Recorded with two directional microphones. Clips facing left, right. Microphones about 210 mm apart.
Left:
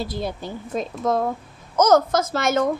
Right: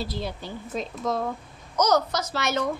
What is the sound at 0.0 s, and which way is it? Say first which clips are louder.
A child's voice: left 4 dB; 50° left (ahead or behind).